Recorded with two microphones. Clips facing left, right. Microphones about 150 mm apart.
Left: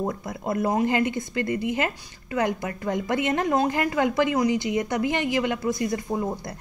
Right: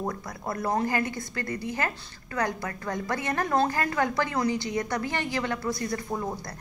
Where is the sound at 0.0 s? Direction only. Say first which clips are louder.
Left 4 dB; 20° left (ahead or behind).